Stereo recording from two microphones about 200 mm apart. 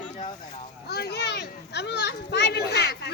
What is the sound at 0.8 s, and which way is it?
A child's voice, 55° left (ahead or behind).